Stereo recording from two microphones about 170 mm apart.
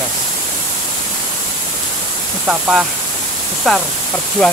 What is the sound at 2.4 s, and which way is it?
Speech, 5° right (ahead or behind).